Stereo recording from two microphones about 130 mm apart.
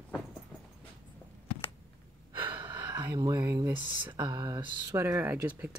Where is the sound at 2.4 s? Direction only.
40° right (ahead or behind).